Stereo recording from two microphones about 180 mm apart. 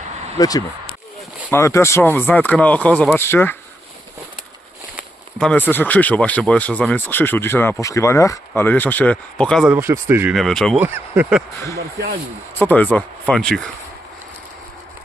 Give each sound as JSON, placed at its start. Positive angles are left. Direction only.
{"t": 0.3, "sound": "speech", "side_deg": 20}
{"t": 5.4, "sound": "speech", "side_deg": 10}
{"t": 9.6, "sound": "speech", "side_deg": -15}
{"t": 10.3, "sound": "speech", "side_deg": 0}
{"t": 10.8, "sound": "speech", "side_deg": -10}
{"t": 12.5, "sound": "speech", "side_deg": 10}